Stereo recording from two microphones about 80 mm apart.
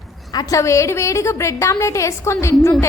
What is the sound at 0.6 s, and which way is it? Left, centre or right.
A woman's voice, left.